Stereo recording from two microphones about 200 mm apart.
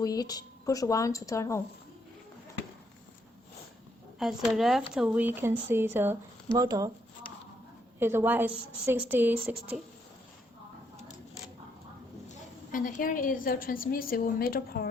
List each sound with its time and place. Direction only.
0.0 s speech: 20° left (ahead or behind)
4.2 s speech: centre (ahead or behind); by 6.9 s 20° right (ahead or behind)
7.9 s speech: 10° right (ahead or behind)
12.7 s a woman's voice: 45° left (ahead or behind)